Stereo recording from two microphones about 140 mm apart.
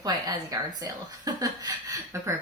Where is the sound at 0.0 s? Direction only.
25° right (ahead or behind).